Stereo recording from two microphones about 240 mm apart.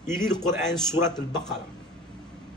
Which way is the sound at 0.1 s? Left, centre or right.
Centre.